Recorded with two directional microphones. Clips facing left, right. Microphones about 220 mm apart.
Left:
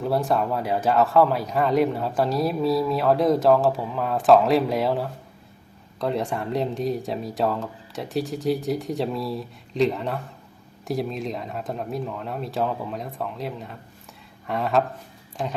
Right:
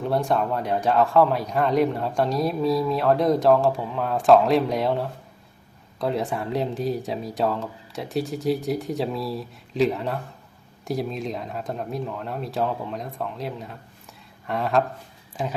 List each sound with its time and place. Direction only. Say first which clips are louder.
0.0 s a man's voice: even; centre (ahead or behind)